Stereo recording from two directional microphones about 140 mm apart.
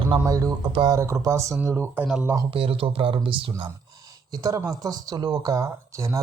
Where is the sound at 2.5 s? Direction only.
40° right (ahead or behind).